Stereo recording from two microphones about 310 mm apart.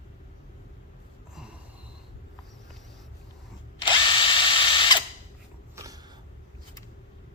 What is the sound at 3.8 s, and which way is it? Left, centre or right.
Drill, centre.